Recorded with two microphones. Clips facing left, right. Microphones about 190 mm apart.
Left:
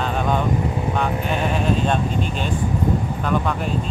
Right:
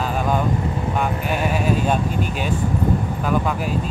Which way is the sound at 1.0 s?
5° right (ahead or behind).